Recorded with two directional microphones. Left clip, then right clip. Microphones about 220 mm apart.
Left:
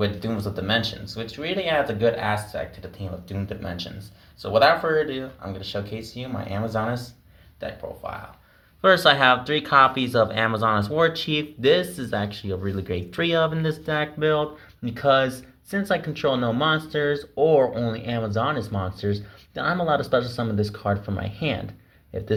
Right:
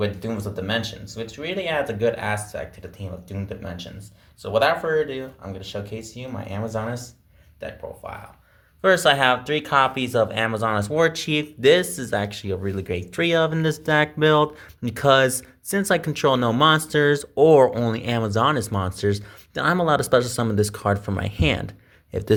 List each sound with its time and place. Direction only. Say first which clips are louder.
0.0 s speech: even; 5° right (ahead or behind); by 21.6 s 40° right (ahead or behind)